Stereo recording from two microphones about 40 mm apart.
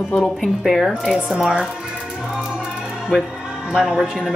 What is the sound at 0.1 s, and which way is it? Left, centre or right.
Speech, centre.